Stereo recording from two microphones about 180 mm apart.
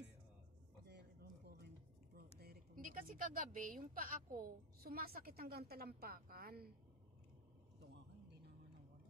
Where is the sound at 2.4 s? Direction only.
55° right (ahead or behind).